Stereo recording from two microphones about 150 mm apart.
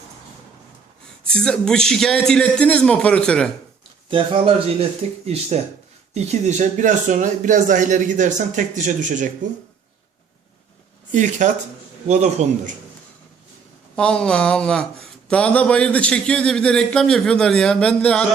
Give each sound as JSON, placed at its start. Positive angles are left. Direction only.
{"t": 1.2, "sound": "a man's voice", "side_deg": 5}
{"t": 4.1, "sound": "speech", "side_deg": -35}
{"t": 11.1, "sound": "a man's voice", "side_deg": -55}
{"t": 13.9, "sound": "a man's voice", "side_deg": 5}